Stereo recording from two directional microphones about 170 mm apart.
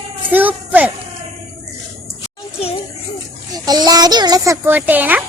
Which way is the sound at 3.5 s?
25° right (ahead or behind).